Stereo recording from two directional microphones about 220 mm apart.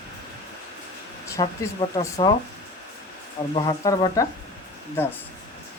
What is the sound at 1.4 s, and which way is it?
Speech, 15° left (ahead or behind).